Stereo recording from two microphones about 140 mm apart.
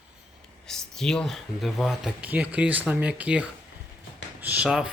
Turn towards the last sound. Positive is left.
turn(degrees=-5)  # may be behind; listen again after turning